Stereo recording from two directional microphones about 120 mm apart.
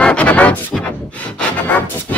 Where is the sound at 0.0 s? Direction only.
10° left (ahead or behind).